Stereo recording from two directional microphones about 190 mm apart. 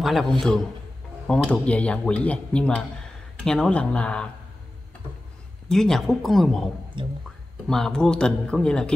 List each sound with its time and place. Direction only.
0.0 s a man's voice: centre (ahead or behind)
5.7 s speech: centre (ahead or behind)
7.0 s speech: 25° right (ahead or behind)
7.6 s speech: 5° left (ahead or behind)